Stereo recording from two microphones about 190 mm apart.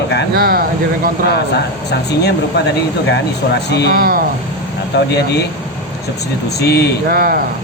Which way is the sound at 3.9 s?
50° right (ahead or behind).